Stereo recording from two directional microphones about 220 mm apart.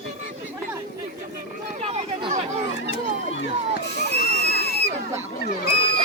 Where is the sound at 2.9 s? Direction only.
55° left (ahead or behind).